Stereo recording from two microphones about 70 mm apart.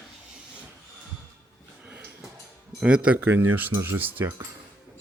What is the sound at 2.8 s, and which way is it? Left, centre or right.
Speech, centre.